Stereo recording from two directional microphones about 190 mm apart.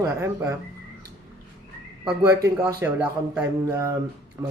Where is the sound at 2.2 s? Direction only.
15° right (ahead or behind).